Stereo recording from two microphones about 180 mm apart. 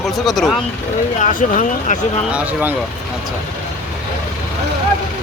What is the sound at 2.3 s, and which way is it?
Speech, 10° right (ahead or behind).